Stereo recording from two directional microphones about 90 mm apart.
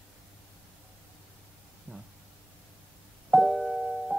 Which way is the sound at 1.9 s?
15° left (ahead or behind).